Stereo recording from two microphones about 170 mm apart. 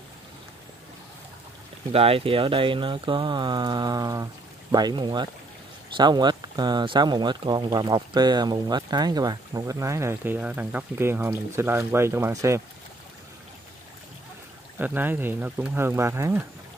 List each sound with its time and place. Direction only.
1.9 s speech: 35° right (ahead or behind); by 12.6 s 20° right (ahead or behind)
14.8 s speech: 10° right (ahead or behind)